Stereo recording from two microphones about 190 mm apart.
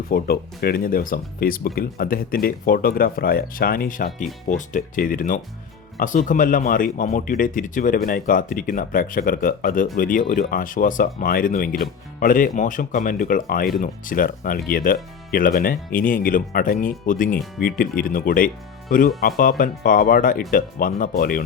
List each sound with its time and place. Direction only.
0.1 s speech: 50° left (ahead or behind)